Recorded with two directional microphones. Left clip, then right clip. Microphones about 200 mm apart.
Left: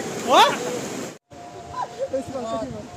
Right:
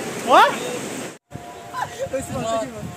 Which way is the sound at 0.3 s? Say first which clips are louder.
Right 2 dB; 30° right (ahead or behind).